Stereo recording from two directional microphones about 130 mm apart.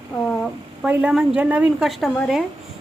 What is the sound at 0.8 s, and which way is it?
A woman's voice, 10° right (ahead or behind).